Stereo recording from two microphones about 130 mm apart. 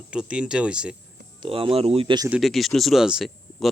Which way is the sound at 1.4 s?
45° right (ahead or behind).